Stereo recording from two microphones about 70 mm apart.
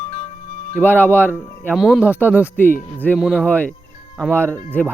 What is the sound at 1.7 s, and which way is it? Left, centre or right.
Speech, centre.